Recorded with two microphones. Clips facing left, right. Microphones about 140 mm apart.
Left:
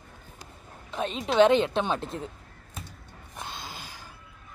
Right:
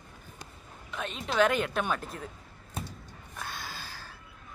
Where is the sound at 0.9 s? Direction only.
35° left (ahead or behind).